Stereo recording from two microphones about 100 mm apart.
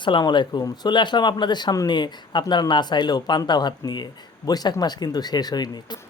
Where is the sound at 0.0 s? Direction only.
50° left (ahead or behind).